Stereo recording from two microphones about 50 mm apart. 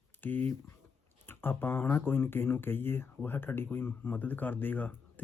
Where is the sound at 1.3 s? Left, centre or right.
Left.